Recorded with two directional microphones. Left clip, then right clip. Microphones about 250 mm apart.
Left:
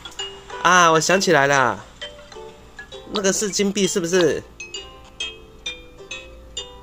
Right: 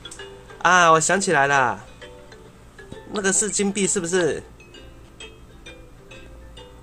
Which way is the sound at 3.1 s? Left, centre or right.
Centre.